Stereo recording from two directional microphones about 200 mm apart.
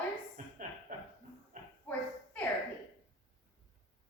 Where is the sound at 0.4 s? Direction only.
40° right (ahead or behind).